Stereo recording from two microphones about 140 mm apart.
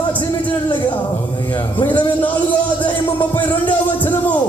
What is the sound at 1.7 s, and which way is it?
Music, 10° left (ahead or behind).